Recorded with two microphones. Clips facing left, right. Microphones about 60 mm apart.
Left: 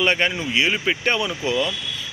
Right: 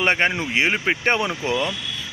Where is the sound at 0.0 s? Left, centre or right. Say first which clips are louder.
Right 1 dB; right.